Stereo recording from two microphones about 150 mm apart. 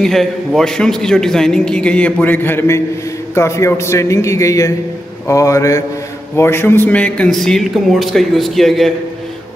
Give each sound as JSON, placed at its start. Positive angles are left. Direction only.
{"t": 0.0, "sound": "a man's voice", "side_deg": 0}